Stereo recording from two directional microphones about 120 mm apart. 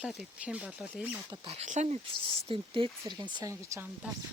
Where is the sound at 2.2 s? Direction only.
45° right (ahead or behind).